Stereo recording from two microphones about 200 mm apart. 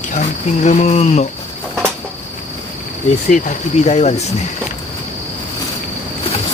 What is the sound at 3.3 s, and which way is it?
Speech, 35° left (ahead or behind).